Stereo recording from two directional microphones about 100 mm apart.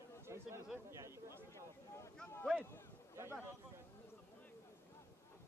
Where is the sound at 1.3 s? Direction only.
25° left (ahead or behind).